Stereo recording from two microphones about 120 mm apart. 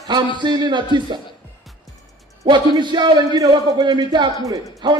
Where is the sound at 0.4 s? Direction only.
40° right (ahead or behind).